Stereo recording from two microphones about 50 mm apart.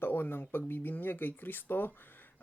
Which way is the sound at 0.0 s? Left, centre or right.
Left.